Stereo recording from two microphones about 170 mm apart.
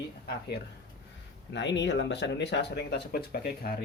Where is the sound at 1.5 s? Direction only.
90° left.